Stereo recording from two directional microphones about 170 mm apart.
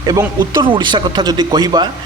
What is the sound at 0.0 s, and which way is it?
Speech, 25° right (ahead or behind).